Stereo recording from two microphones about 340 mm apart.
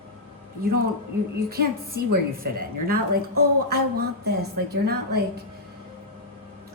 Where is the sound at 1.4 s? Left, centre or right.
Right.